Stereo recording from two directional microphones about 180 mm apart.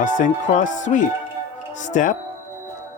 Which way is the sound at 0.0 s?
45° left (ahead or behind).